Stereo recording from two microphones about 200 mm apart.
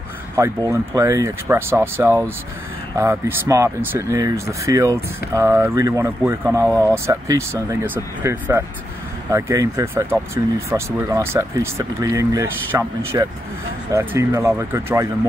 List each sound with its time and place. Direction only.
0.4 s speech: 15° right (ahead or behind)